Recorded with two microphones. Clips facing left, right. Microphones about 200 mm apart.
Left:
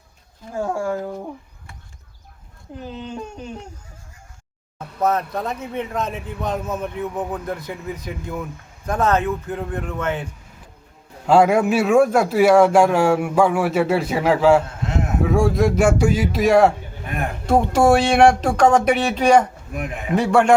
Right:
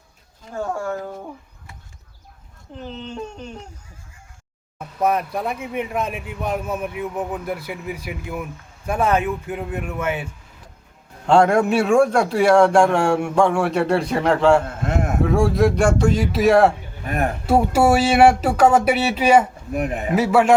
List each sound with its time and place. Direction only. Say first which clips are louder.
0.5 s speech: left 2 dB; 10° left (ahead or behind)
2.7 s speech: left 1 dB; 10° left (ahead or behind)
4.9 s a man's voice: even; 10° right (ahead or behind)
11.3 s a man's voice: even; 5° left (ahead or behind)
19.7 s speech: right 6 dB; 35° right (ahead or behind)
20.1 s a man's voice: even; 5° right (ahead or behind)